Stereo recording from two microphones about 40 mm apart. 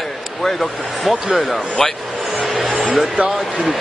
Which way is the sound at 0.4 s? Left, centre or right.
Centre.